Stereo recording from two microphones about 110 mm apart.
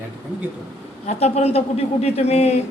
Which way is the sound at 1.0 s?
85° left.